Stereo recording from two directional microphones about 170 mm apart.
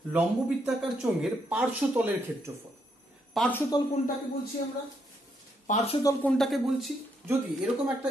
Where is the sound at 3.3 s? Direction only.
10° left (ahead or behind).